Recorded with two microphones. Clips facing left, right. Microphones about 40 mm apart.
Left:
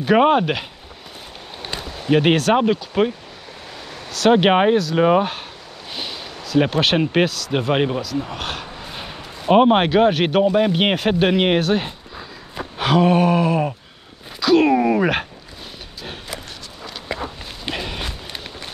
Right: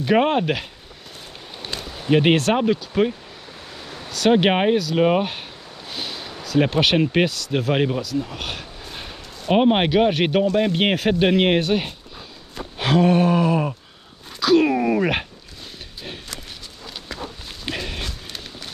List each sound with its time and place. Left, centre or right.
0.0 s speech: centre
1.6 s a sound: centre
2.0 s speech: centre
2.5 s speech: centre
3.9 s a sound: centre
4.3 s speech: centre
7.5 s speech: centre
8.8 s dog: centre
9.5 s speech: centre
17.6 s run: centre